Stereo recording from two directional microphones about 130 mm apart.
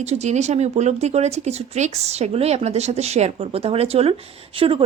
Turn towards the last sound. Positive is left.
turn(degrees=-40)  # may be behind; listen again after turning